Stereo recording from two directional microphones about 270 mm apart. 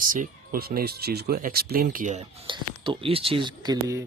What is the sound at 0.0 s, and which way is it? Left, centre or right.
Speech, right.